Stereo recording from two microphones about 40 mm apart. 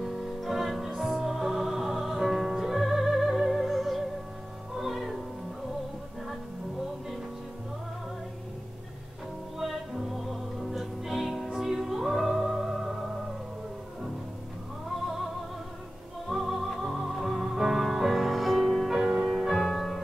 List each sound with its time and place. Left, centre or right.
0.0 s music: centre
9.6 s music: centre
16.3 s music: centre
18.9 s music: centre